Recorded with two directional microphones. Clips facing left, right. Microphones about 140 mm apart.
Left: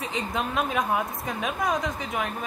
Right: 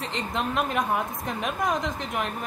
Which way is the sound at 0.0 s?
5° left (ahead or behind).